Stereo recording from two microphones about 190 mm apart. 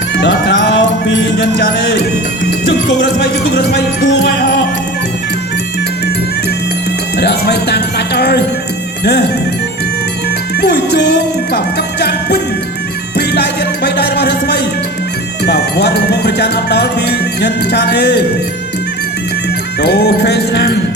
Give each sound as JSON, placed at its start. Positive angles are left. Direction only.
{"t": 0.2, "sound": "music", "side_deg": 60}
{"t": 2.9, "sound": "speech", "side_deg": 60}
{"t": 7.2, "sound": "music", "side_deg": 60}
{"t": 10.6, "sound": "music", "side_deg": 60}
{"t": 13.8, "sound": "a sound", "side_deg": 60}
{"t": 15.4, "sound": "music", "side_deg": 60}
{"t": 19.8, "sound": "music", "side_deg": 60}